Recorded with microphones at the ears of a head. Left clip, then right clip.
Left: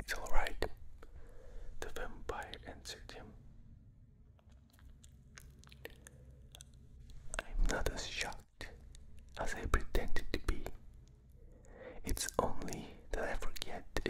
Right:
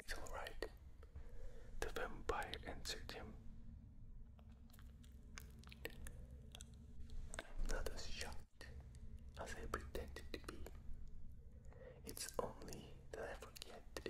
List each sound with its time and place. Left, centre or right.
0.0 s whispering: left
1.9 s whispering: centre
5.3 s chewing: centre
7.2 s whispering: left